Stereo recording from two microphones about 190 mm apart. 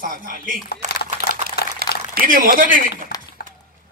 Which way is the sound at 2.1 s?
45° right (ahead or behind).